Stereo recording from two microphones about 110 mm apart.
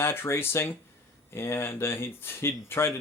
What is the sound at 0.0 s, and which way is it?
Speech, 20° left (ahead or behind).